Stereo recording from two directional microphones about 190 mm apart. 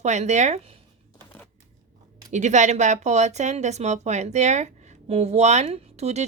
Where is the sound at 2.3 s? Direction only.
40° right (ahead or behind).